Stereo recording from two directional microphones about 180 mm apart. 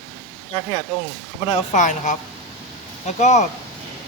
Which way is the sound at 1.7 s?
40° left (ahead or behind).